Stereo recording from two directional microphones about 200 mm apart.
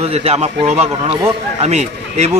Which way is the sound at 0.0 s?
30° right (ahead or behind).